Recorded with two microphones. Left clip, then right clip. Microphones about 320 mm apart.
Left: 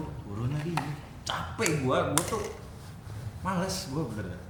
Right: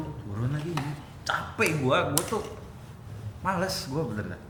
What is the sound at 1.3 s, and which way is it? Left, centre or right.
Speech, right.